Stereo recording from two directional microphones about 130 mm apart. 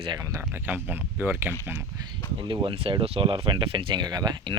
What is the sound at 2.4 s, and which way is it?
Speech, 40° right (ahead or behind).